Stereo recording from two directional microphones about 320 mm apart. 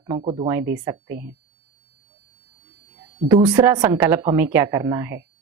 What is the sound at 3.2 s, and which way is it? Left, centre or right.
A woman's voice, centre.